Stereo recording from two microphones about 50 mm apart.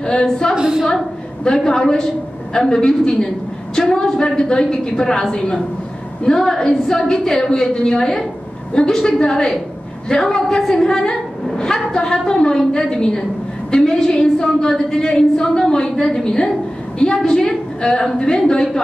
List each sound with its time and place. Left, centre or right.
0.0 s a woman's voice: centre
0.6 s a woman's voice: centre
1.4 s a woman's voice: centre